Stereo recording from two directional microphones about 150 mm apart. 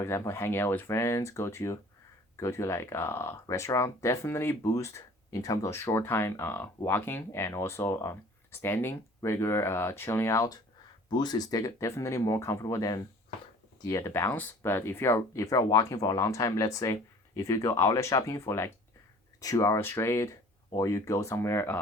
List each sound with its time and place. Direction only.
0.0 s speech: 15° left (ahead or behind)